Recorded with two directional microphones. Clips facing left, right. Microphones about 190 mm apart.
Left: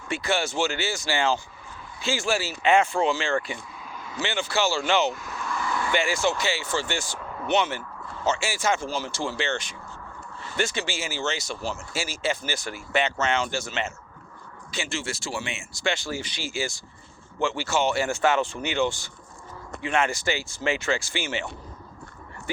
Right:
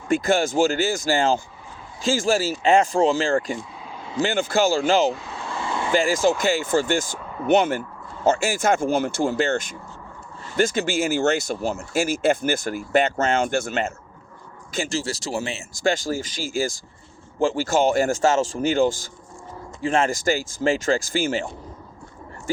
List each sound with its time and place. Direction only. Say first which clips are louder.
0.1 s speech: right 7 dB; 45° right (ahead or behind)
3.8 s a sound: right 4 dB; 25° right (ahead or behind)
4.2 s speech: right 6 dB; 50° right (ahead or behind)
5.1 s vehicle: right 1 dB; 30° right (ahead or behind)
6.2 s speech: right 6 dB; 45° right (ahead or behind)
14.7 s speech: right 6 dB; 40° right (ahead or behind)
17.4 s speech: right 6 dB; 35° right (ahead or behind)
17.7 s speech: right 5 dB; 45° right (ahead or behind); by 20.1 s 30° right (ahead or behind)
20.1 s speech: right 6 dB; 45° right (ahead or behind)